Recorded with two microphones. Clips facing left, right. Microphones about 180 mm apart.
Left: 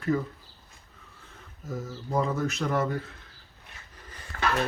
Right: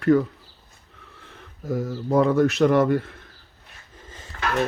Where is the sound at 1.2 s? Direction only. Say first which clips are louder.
Right 10 dB; 70° right (ahead or behind).